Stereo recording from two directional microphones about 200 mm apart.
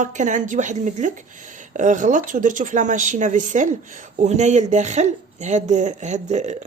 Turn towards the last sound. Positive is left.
turn(degrees=-35)  # may be behind; listen again after turning